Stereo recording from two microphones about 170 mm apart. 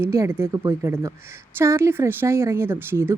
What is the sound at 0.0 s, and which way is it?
A woman's voice, 15° right (ahead or behind).